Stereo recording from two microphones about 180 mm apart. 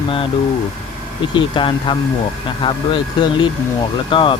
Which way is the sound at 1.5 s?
30° left (ahead or behind).